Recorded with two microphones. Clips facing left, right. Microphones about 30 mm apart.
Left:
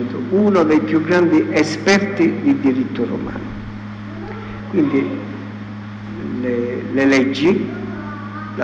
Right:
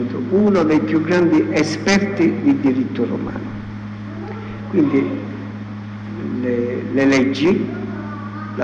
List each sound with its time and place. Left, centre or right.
0.0 s a sound: centre
0.8 s a man's voice: centre
4.7 s a man's voice: centre
6.4 s a man's voice: centre